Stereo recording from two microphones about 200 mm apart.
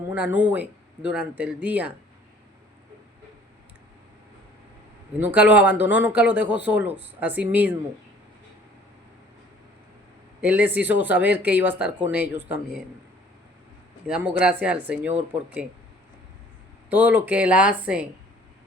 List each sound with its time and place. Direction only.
0.1 s speech: 10° right (ahead or behind)
5.2 s speech: 10° right (ahead or behind)
10.4 s speech: 10° right (ahead or behind)
14.1 s speech: 5° right (ahead or behind)
16.9 s speech: 10° right (ahead or behind)